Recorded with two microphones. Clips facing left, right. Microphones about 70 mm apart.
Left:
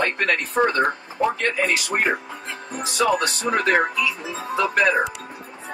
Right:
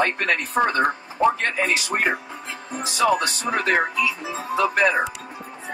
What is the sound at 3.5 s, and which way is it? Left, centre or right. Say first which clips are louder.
Speech: left 2 dB; left.